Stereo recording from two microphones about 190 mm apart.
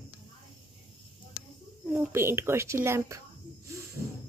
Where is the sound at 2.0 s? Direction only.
15° right (ahead or behind).